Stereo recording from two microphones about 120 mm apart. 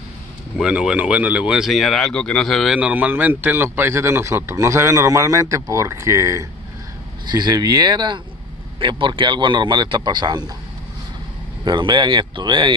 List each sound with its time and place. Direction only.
0.6 s speech: 5° right (ahead or behind)
2.8 s a man's voice: 15° right (ahead or behind)
7.2 s speech: 35° right (ahead or behind)
11.6 s speech: 40° right (ahead or behind)